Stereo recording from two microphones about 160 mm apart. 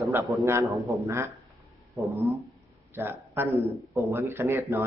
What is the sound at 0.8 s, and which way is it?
Speech, 15° right (ahead or behind).